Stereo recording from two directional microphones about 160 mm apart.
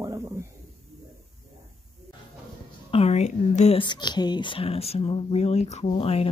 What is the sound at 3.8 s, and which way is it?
Speech, 30° left (ahead or behind).